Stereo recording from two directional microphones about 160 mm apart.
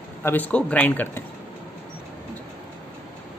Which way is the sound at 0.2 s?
10° left (ahead or behind).